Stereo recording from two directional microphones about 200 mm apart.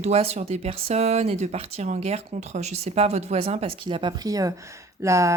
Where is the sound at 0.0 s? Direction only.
30° right (ahead or behind).